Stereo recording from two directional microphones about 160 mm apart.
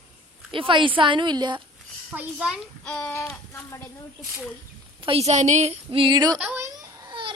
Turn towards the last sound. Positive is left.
turn(degrees=-20)  # may be behind; listen again after turning